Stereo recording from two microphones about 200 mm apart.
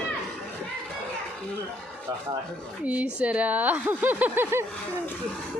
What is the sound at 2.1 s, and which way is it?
Speech, 15° right (ahead or behind).